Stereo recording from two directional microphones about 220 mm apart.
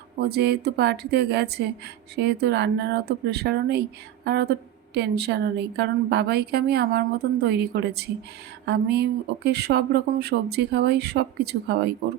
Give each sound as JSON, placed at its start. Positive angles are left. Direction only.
{"t": 0.2, "sound": "speech", "side_deg": -45}